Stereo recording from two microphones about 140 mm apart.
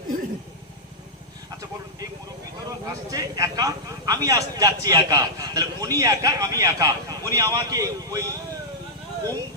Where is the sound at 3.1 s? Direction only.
25° right (ahead or behind).